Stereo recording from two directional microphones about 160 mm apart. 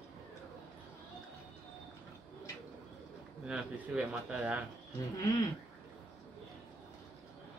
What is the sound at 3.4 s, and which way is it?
Speech, 5° right (ahead or behind).